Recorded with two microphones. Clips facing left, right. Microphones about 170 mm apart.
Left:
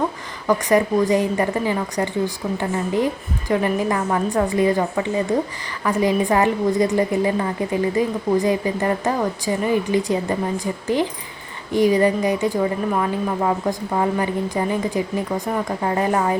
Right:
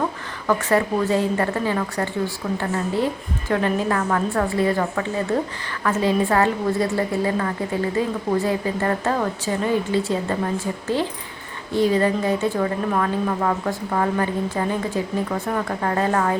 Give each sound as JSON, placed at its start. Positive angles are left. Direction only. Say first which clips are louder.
{"t": 0.4, "sound": "a woman's voice", "louder": "left 2 dB", "side_deg": 15}